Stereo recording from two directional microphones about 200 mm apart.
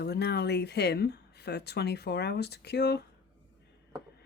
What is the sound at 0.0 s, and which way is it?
Speech, 55° left (ahead or behind).